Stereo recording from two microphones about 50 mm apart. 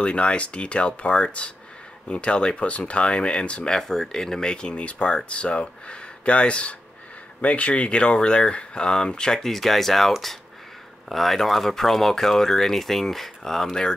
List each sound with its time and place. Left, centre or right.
0.0 s speech: left
3.7 s speech: centre